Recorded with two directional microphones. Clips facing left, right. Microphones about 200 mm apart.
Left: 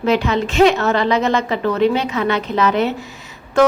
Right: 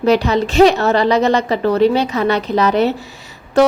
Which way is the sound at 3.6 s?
35° right (ahead or behind).